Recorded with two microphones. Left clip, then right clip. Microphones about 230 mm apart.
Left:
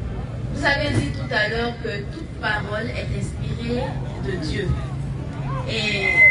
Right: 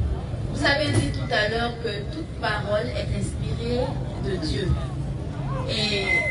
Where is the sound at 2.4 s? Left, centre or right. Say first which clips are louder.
Left 3 dB; right.